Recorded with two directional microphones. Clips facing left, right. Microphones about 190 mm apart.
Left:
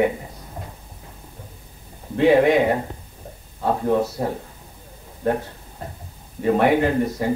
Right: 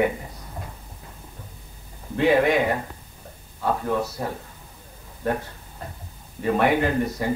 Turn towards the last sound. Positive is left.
turn(degrees=30)  # may be behind; listen again after turning